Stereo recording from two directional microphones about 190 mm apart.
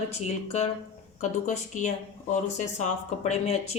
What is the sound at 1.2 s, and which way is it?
Speech, 40° left (ahead or behind).